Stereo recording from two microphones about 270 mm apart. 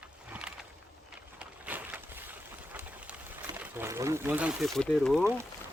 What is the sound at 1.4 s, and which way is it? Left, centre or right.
Boat, centre.